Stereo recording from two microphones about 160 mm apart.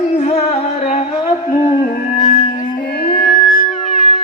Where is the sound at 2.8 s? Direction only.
75° left (ahead or behind).